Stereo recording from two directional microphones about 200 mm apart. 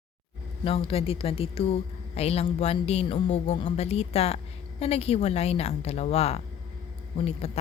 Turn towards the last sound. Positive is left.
turn(degrees=30)  # may be behind; listen again after turning